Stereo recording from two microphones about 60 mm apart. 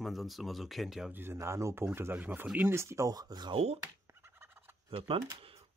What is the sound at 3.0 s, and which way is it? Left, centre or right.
Speech, right.